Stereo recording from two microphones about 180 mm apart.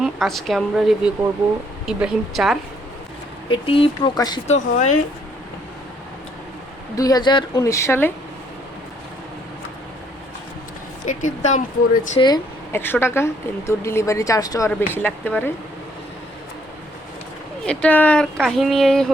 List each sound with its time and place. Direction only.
0.0 s speech: centre (ahead or behind)
3.5 s a woman's voice: 30° left (ahead or behind)
4.4 s speech: 40° left (ahead or behind)
6.9 s a woman's voice: 20° left (ahead or behind)
11.0 s speech: 45° left (ahead or behind)
12.2 s a woman's voice: 25° left (ahead or behind)
12.7 s speech: 10° left (ahead or behind)
17.7 s speech: 5° left (ahead or behind)